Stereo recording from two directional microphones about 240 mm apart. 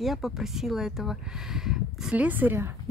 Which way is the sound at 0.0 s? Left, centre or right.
Centre.